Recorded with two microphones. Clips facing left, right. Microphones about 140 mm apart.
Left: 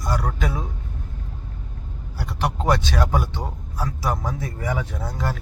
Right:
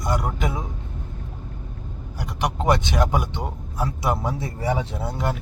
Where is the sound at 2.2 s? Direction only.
15° right (ahead or behind).